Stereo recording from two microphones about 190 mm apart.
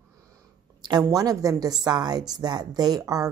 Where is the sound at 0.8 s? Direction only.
20° right (ahead or behind).